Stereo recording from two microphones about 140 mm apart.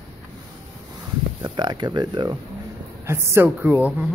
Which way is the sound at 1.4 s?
30° right (ahead or behind).